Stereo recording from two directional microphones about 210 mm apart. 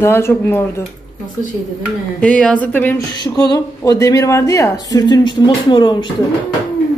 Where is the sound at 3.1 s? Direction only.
20° left (ahead or behind).